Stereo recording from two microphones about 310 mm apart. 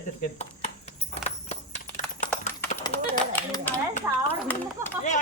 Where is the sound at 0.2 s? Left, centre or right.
Left.